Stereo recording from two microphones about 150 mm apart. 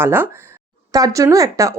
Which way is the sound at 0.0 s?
15° right (ahead or behind).